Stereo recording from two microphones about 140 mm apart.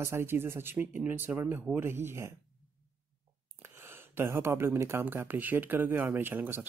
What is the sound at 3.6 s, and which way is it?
Speech, 15° right (ahead or behind).